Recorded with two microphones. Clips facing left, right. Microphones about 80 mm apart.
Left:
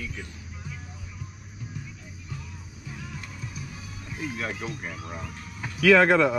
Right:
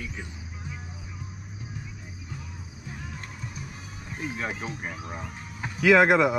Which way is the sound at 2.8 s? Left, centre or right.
Right.